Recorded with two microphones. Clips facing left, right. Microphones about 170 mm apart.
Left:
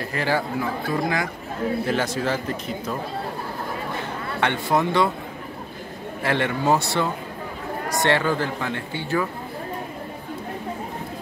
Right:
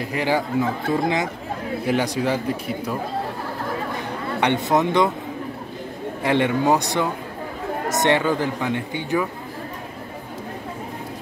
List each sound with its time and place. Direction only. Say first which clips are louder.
0.0 s speech: right 2 dB; 15° right (ahead or behind)
4.4 s speech: right 2 dB; 20° right (ahead or behind)
6.2 s speech: right 3 dB; 15° right (ahead or behind)